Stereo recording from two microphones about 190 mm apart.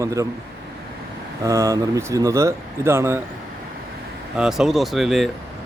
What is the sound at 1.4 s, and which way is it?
Speech, 15° right (ahead or behind).